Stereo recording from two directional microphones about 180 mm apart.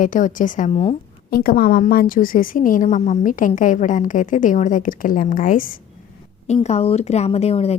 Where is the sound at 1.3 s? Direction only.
55° left (ahead or behind).